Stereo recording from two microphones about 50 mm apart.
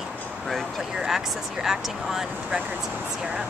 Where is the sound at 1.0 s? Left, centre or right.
Centre.